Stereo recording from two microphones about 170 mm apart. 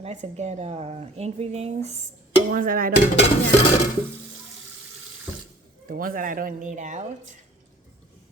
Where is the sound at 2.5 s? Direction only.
55° right (ahead or behind).